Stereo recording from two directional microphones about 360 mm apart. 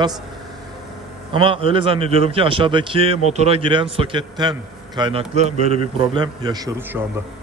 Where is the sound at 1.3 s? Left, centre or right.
Centre.